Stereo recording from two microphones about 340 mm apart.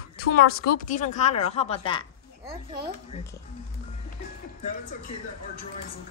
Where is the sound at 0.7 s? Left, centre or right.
Left.